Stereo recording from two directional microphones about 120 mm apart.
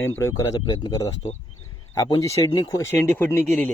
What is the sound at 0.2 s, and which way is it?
Speech, 30° left (ahead or behind).